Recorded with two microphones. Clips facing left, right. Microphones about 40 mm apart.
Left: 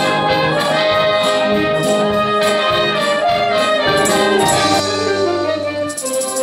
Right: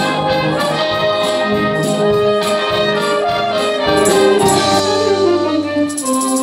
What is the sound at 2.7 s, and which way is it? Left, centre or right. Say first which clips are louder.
Music: even; left.